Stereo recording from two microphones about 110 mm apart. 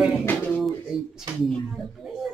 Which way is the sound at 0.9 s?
55° right (ahead or behind).